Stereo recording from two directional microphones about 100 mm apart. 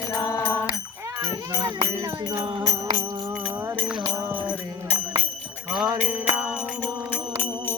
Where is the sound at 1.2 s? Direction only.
40° right (ahead or behind).